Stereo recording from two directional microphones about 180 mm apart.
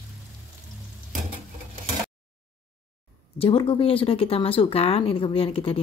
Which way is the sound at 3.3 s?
30° left (ahead or behind).